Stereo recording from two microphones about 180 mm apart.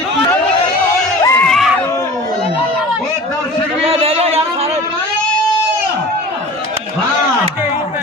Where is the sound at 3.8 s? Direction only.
35° right (ahead or behind).